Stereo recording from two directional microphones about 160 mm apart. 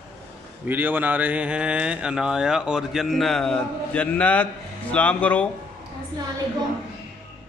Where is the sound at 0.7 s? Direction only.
10° right (ahead or behind); by 5.4 s 10° left (ahead or behind).